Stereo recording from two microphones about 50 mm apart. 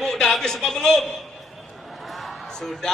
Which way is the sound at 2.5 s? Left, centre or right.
Centre.